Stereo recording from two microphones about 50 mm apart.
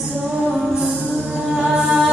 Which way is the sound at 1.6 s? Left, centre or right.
Centre.